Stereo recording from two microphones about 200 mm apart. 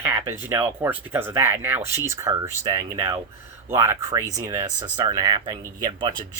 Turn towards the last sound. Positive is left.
turn(degrees=-20)  # may be behind; listen again after turning